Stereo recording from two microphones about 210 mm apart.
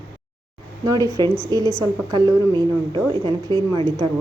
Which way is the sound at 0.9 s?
15° right (ahead or behind).